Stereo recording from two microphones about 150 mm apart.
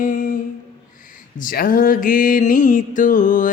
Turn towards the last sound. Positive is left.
turn(degrees=60)  # may be behind; listen again after turning